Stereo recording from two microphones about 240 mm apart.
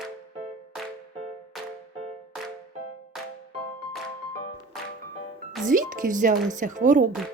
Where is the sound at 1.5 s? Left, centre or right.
Centre.